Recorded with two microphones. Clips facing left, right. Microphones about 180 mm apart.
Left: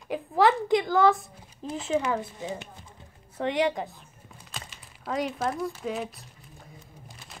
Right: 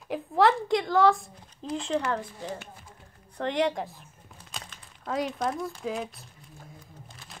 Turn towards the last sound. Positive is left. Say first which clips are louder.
# right 1 dB
turn(degrees=0)  # may be behind; listen again after turning